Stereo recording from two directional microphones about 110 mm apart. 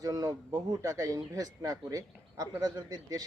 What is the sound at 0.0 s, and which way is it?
Speech, 30° right (ahead or behind).